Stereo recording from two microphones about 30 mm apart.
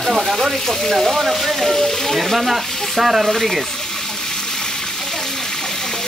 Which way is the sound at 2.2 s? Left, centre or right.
Centre.